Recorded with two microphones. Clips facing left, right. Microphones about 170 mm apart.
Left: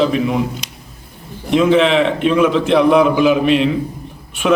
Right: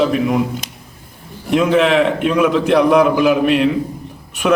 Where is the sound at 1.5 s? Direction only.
5° right (ahead or behind).